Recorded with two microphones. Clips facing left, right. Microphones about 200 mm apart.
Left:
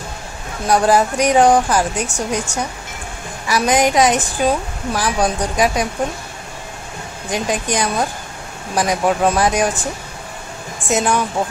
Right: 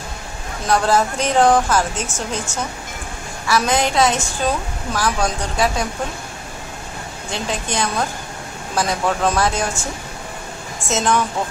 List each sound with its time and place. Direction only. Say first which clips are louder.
0.7 s a woman's voice: left 3 dB; 15° left (ahead or behind)
7.2 s a woman's voice: left 5 dB; 15° left (ahead or behind)